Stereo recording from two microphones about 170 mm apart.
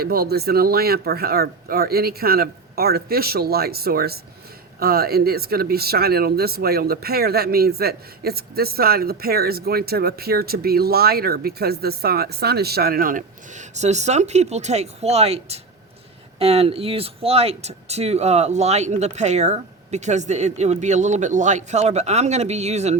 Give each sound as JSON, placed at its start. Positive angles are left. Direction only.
{"t": 0.0, "sound": "speech", "side_deg": -65}